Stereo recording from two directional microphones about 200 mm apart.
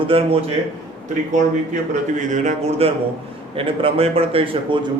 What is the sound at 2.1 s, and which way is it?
A man's voice, 35° right (ahead or behind).